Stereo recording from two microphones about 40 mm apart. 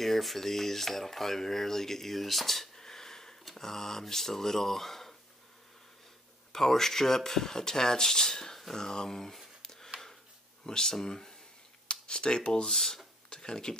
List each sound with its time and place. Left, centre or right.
0.0 s speech: centre
6.5 s speech: centre
9.6 s a sound: centre
10.6 s speech: centre
11.9 s speech: left